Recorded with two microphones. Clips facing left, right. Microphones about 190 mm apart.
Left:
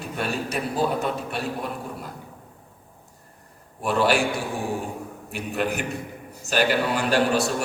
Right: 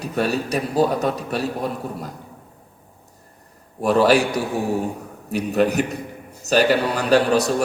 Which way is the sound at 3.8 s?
40° right (ahead or behind).